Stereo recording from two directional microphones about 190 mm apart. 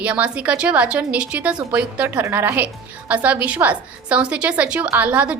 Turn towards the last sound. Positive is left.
turn(degrees=-5)  # may be behind; listen again after turning